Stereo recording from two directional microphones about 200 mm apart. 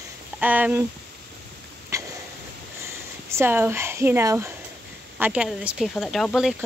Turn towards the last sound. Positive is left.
turn(degrees=0)  # may be behind; listen again after turning